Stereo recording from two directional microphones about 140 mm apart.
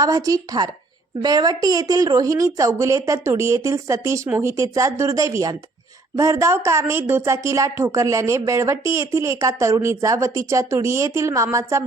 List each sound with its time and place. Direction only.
0.0 s speech: 25° right (ahead or behind)